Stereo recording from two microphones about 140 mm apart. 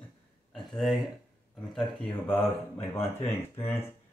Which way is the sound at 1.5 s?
Centre (ahead or behind).